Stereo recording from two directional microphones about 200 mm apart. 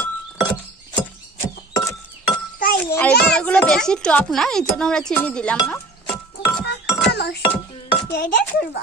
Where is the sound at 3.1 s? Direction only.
50° left (ahead or behind).